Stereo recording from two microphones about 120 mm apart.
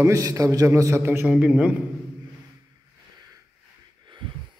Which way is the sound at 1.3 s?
10° right (ahead or behind).